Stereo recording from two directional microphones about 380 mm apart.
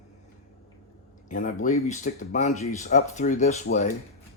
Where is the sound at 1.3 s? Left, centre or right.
Left.